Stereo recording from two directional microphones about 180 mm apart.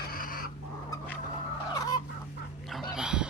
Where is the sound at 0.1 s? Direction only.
50° left (ahead or behind).